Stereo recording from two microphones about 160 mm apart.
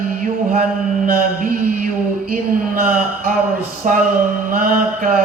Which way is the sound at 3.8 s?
55° right (ahead or behind).